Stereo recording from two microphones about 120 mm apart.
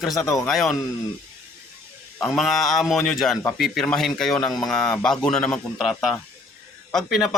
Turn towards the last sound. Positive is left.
turn(degrees=0)  # may be behind; listen again after turning